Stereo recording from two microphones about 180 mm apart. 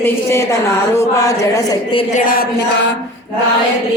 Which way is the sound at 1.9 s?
40° left (ahead or behind).